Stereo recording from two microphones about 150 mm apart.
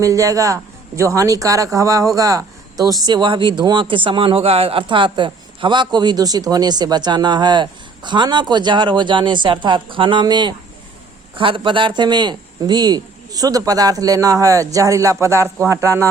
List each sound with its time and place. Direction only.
0.0 s a man's voice: 20° right (ahead or behind)